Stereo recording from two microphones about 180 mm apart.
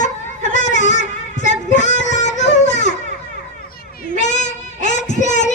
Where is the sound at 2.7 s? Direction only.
40° left (ahead or behind).